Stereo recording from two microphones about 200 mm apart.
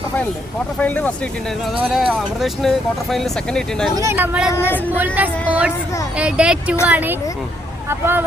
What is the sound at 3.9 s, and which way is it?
Speech, 15° right (ahead or behind).